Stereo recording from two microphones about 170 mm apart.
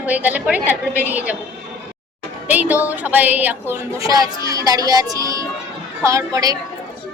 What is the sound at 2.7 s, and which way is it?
Speech, 10° right (ahead or behind).